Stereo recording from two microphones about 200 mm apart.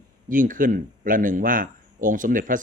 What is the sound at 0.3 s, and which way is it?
A man's voice, 40° right (ahead or behind).